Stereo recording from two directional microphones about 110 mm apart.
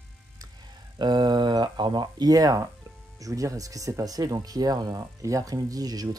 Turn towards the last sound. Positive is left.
turn(degrees=-35)  # may be behind; listen again after turning